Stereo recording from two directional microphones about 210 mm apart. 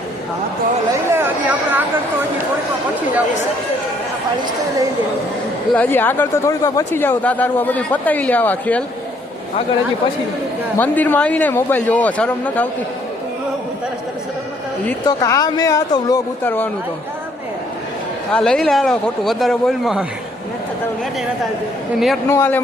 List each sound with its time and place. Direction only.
1.1 s a sound: 10° right (ahead or behind)
5.7 s speech: 10° left (ahead or behind)
10.8 s speech: 10° left (ahead or behind)
15.0 s speech: 15° left (ahead or behind)
18.3 s speech: 5° left (ahead or behind)
22.3 s speech: 10° left (ahead or behind)